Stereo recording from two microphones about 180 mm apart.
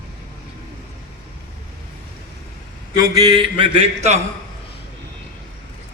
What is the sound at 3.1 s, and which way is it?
Speech, 20° right (ahead or behind).